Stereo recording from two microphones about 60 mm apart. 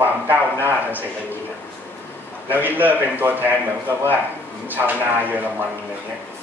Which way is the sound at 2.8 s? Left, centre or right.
Right.